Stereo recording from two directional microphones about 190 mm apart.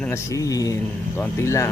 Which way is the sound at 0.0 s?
15° left (ahead or behind).